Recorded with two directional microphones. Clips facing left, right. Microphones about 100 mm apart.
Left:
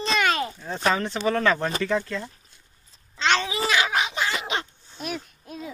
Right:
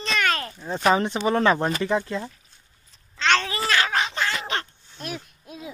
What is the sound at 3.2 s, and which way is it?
Babbling, 15° left (ahead or behind).